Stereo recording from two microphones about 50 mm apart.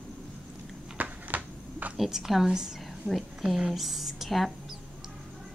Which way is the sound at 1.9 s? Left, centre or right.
Centre.